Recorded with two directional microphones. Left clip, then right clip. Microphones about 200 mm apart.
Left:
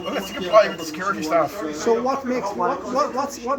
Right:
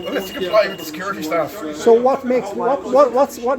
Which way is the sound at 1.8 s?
45° right (ahead or behind).